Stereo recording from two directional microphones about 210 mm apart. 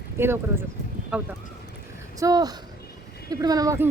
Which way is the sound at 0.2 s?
10° right (ahead or behind).